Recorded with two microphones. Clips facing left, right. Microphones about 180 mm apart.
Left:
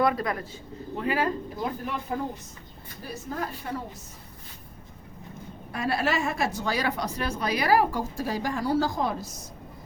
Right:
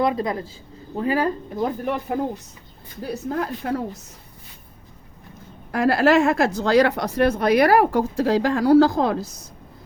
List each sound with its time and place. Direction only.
0.0 s a man's voice: 20° right (ahead or behind)
0.9 s speech: 35° right (ahead or behind)
1.8 s speech: 60° right (ahead or behind)
3.3 s speech: 70° right (ahead or behind)
5.7 s speech: 75° right (ahead or behind); by 8.0 s 55° right (ahead or behind)
8.2 s speech: 90° right; by 9.3 s 70° right (ahead or behind)